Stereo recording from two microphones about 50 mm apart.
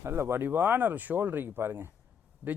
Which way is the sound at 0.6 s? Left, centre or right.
Right.